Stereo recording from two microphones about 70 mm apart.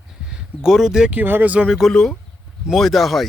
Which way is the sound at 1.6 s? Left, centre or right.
Centre.